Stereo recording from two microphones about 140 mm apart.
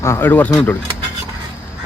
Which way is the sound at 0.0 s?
15° left (ahead or behind).